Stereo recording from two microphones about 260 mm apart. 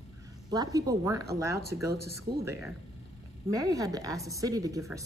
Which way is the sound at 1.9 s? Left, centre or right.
Right.